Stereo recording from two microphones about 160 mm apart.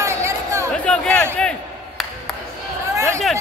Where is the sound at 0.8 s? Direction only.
5° left (ahead or behind).